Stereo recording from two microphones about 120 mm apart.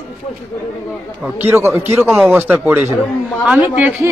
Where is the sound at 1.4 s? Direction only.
20° right (ahead or behind).